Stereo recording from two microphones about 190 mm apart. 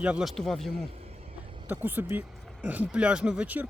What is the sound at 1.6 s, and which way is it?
Speech, 10° right (ahead or behind).